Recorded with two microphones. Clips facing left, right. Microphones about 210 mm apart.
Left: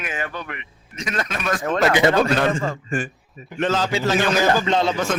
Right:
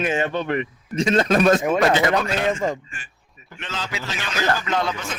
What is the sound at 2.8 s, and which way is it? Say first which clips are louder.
A man's voice: left 19 dB; 45° left (ahead or behind).